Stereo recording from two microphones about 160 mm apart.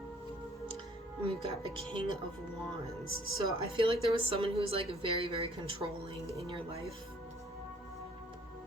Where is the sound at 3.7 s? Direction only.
35° right (ahead or behind).